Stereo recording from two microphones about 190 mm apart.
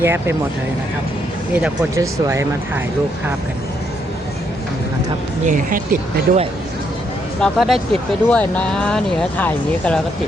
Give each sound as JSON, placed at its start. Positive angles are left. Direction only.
{"t": 0.0, "sound": "speech", "side_deg": -10}
{"t": 1.5, "sound": "speech", "side_deg": -15}
{"t": 5.5, "sound": "speech", "side_deg": -45}
{"t": 7.4, "sound": "speech", "side_deg": 0}